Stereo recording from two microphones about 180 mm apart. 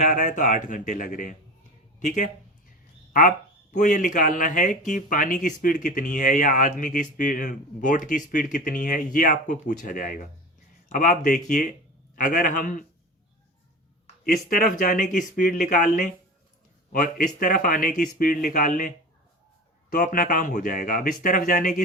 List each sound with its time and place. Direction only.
0.0 s speech: 45° left (ahead or behind)
14.3 s speech: 50° left (ahead or behind)
19.9 s speech: 50° left (ahead or behind)